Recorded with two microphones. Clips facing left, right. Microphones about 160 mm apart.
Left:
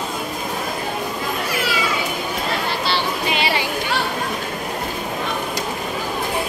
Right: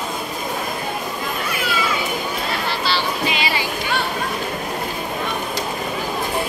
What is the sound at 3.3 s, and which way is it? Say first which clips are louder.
Chatter: left 2 dB; 60° left (ahead or behind).